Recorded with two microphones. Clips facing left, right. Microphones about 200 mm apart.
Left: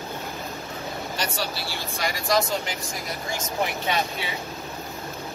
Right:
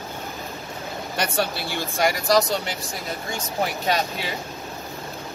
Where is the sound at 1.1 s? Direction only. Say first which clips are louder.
Right 7 dB; 55° right (ahead or behind).